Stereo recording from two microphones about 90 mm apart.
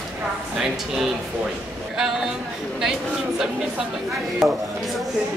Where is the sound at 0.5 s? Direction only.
5° right (ahead or behind).